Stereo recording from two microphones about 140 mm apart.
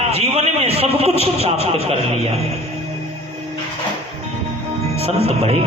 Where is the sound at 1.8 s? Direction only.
45° right (ahead or behind).